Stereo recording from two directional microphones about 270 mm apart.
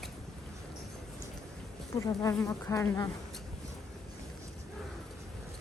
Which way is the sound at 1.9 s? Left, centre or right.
Centre.